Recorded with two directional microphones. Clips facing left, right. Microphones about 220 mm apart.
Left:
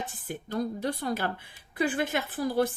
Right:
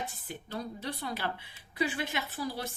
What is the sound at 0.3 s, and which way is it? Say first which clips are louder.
Speech: left 11 dB; 45° left (ahead or behind).